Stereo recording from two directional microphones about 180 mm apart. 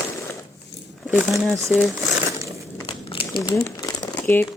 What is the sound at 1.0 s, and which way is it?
Speech, 5° right (ahead or behind).